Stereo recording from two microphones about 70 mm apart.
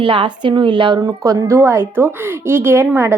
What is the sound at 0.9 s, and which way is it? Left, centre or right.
Speech, right.